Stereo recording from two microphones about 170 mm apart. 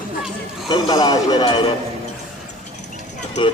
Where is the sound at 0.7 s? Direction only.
25° left (ahead or behind).